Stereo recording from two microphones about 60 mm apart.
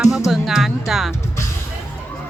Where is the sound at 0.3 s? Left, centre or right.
Centre.